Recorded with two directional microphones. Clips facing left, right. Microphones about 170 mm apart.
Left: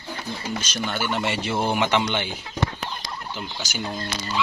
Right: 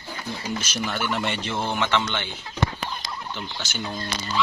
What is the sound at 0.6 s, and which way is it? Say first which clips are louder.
A man's voice: left 1 dB; 5° right (ahead or behind).